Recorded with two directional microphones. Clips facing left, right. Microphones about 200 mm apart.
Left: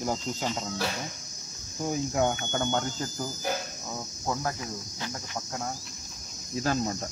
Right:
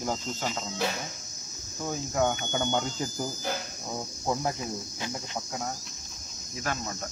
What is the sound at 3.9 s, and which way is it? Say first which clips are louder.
Speech: right 3 dB; 15° right (ahead or behind).